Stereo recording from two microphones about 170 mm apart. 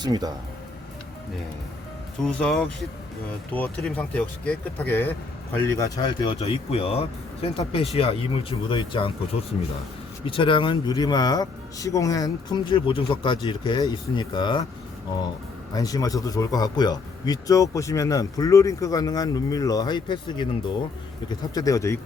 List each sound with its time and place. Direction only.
0.0 s speech: 25° right (ahead or behind)
2.2 s speech: 5° left (ahead or behind)
5.7 s speech: 20° left (ahead or behind)
15.7 s speech: 20° left (ahead or behind)